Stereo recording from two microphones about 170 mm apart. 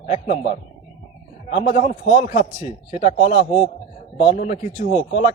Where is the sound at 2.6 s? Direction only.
35° left (ahead or behind).